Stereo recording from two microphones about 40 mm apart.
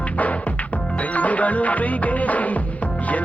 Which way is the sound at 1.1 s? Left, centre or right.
Left.